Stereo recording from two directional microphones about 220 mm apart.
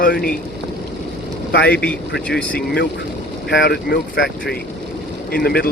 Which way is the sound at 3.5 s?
45° left (ahead or behind).